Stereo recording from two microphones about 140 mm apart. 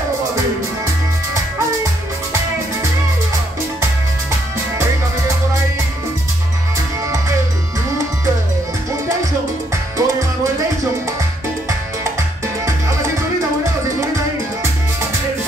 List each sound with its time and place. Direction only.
9.9 s music: 25° right (ahead or behind)